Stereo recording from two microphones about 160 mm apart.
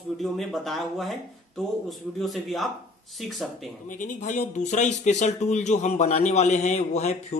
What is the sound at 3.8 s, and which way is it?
Speech, 55° left (ahead or behind).